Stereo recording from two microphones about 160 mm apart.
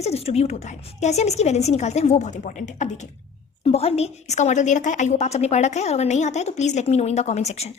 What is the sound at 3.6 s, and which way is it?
A woman's voice, 40° left (ahead or behind).